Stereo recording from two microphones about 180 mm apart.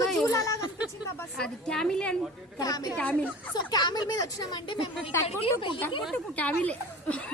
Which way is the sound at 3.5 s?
25° left (ahead or behind).